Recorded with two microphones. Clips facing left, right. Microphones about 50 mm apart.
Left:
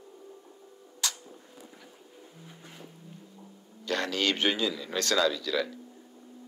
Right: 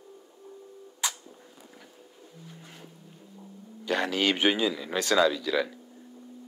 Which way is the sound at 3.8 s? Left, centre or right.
Centre.